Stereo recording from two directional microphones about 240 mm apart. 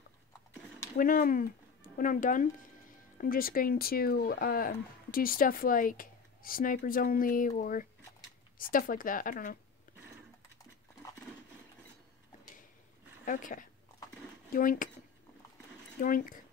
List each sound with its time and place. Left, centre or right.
0.9 s speech: left
13.2 s speech: left
16.0 s speech: left